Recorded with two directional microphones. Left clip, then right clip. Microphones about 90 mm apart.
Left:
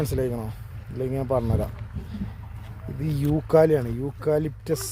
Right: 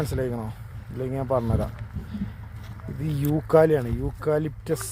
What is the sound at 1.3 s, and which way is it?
Speech, 25° left (ahead or behind).